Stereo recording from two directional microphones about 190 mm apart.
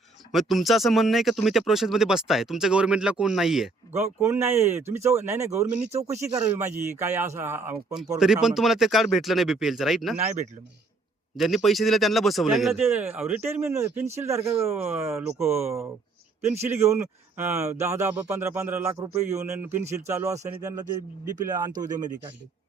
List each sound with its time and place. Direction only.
0.3 s speech: centre (ahead or behind)
3.9 s speech: 15° right (ahead or behind)
5.9 s speech: 35° right (ahead or behind)
6.1 s speech: 15° right (ahead or behind)
8.2 s speech: 5° right (ahead or behind)
11.3 s speech: centre (ahead or behind)
12.8 s speech: 10° right (ahead or behind)
21.4 s speech: 20° right (ahead or behind)